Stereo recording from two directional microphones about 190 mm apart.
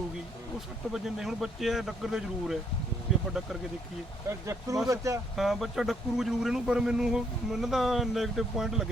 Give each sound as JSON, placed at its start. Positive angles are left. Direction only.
{"t": 0.9, "sound": "speech", "side_deg": 0}
{"t": 3.1, "sound": "vehicle", "side_deg": 0}
{"t": 4.3, "sound": "speech", "side_deg": -15}
{"t": 5.4, "sound": "speech", "side_deg": 0}